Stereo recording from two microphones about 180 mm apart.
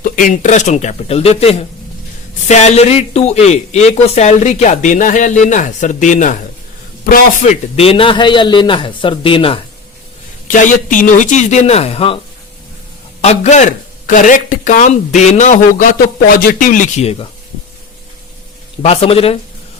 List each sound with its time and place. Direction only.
0.0 s a man's voice: 45° left (ahead or behind)
7.8 s a man's voice: 30° left (ahead or behind)
10.5 s speech: 45° left (ahead or behind); by 12.2 s 30° left (ahead or behind)
13.2 s a man's voice: 35° left (ahead or behind)
18.8 s speech: 35° left (ahead or behind)